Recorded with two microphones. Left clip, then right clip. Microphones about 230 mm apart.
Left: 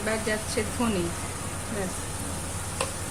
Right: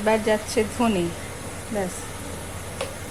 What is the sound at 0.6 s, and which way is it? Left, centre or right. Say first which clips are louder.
Speech: right 6 dB; right.